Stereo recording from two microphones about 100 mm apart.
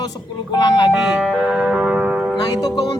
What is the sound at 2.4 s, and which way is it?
Speech, 45° left (ahead or behind).